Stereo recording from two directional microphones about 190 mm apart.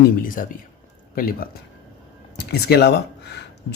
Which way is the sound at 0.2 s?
45° left (ahead or behind).